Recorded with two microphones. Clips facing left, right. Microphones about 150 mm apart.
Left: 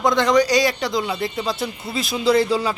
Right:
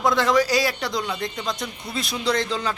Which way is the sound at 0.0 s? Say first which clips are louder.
Left 3 dB; centre (ahead or behind).